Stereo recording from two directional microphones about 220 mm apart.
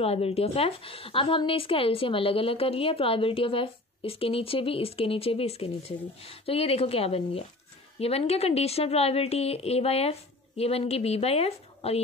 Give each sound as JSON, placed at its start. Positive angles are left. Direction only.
{"t": 0.0, "sound": "a woman's voice", "side_deg": 25}